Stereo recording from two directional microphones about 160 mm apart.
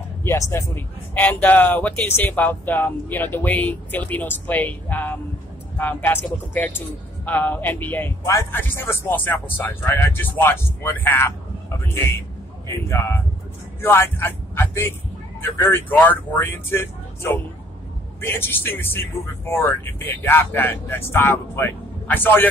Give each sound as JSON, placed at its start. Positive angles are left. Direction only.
{"t": 0.2, "sound": "a man's voice", "side_deg": 15}